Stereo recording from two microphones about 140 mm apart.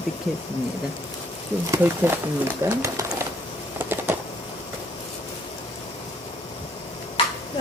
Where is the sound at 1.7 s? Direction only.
15° right (ahead or behind).